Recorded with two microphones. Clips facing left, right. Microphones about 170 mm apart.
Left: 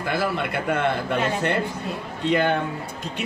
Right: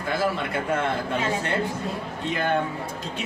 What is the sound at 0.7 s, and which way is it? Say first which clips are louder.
Speech: left 3 dB; 65° left (ahead or behind).